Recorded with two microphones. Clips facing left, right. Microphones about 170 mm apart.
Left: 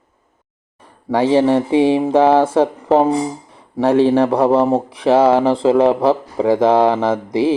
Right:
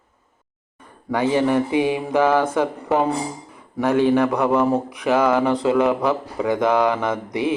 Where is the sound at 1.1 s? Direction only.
30° left (ahead or behind).